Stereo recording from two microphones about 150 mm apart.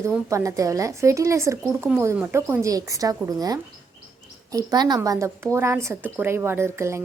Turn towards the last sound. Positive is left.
turn(degrees=-15)  # may be behind; listen again after turning